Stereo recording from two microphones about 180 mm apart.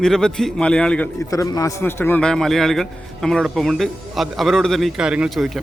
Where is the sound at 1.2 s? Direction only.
20° left (ahead or behind).